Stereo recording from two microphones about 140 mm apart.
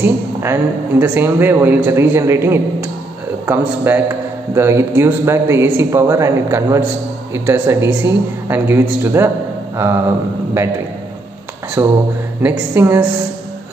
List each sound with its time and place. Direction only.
0.0 s a woman's voice: 15° right (ahead or behind)
11.8 s a man's voice: 20° right (ahead or behind)